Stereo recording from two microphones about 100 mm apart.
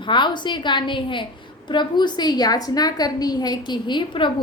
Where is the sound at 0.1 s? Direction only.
50° left (ahead or behind).